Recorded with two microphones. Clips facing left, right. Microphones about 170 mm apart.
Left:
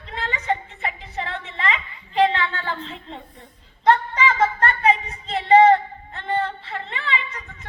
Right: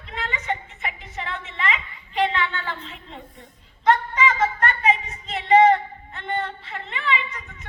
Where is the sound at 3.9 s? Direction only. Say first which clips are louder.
Left 1 dB; 35° left (ahead or behind).